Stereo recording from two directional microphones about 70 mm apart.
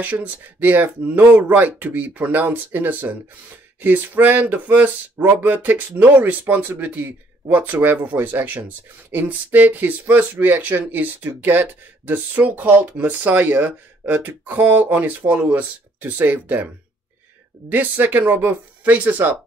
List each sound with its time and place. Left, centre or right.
0.0 s speech: right
17.6 s speech: right